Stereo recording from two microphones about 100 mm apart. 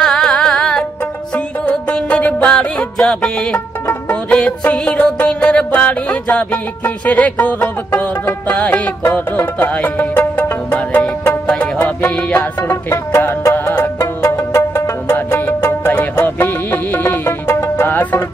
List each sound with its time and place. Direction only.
0.0 s music: 5° left (ahead or behind)